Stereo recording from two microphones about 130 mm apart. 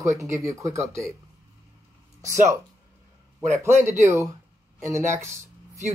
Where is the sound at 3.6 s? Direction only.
20° right (ahead or behind).